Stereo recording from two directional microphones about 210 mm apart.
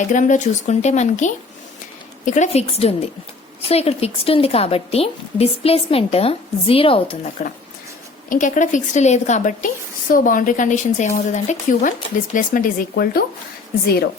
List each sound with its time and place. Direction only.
0.1 s a woman's voice: 35° left (ahead or behind)
7.4 s speech: 35° left (ahead or behind)